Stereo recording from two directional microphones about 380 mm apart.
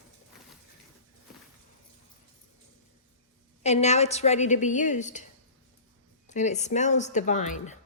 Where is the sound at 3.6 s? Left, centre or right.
Centre.